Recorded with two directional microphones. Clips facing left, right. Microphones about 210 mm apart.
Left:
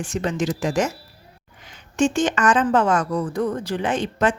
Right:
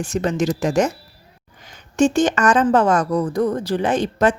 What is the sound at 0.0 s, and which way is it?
Speech, 40° right (ahead or behind).